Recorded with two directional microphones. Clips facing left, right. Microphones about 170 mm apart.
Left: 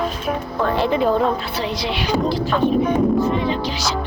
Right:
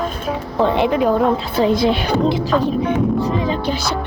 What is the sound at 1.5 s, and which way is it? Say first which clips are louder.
Speech: right 9 dB; 50° right (ahead or behind).